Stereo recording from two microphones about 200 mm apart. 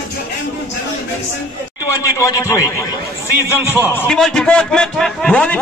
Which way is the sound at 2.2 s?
15° left (ahead or behind).